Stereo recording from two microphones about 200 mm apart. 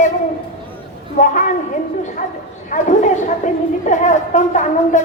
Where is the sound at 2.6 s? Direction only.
40° left (ahead or behind).